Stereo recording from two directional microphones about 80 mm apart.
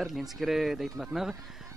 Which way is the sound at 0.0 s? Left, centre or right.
Centre.